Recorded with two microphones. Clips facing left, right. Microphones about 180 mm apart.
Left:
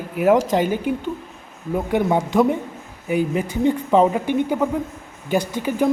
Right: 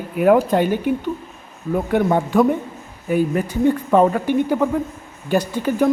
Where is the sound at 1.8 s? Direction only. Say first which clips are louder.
Right 1 dB; 15° left (ahead or behind).